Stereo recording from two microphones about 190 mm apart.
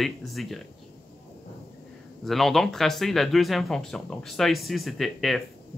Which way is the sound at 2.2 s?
Centre (ahead or behind).